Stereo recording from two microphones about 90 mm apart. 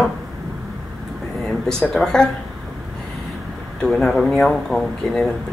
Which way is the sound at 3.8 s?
5° left (ahead or behind).